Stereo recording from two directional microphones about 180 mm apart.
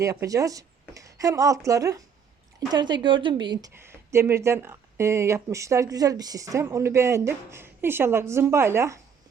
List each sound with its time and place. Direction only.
0.0 s speech: 20° right (ahead or behind)
3.8 s speech: 15° right (ahead or behind)